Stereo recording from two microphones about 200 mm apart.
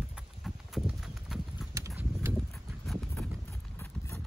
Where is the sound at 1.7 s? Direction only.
15° right (ahead or behind).